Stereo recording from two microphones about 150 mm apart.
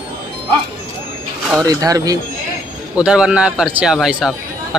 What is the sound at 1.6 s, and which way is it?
Speech, 25° right (ahead or behind).